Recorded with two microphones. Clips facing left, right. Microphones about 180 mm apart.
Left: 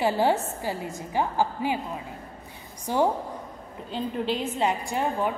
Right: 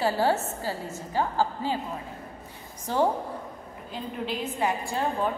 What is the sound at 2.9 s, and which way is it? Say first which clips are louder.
Speech: left 1 dB; 15° left (ahead or behind).